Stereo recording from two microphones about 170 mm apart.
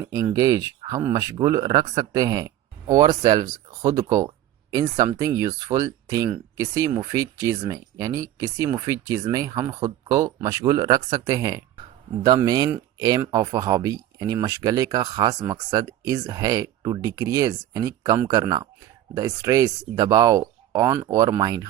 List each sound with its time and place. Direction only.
0.0 s speech: 20° right (ahead or behind)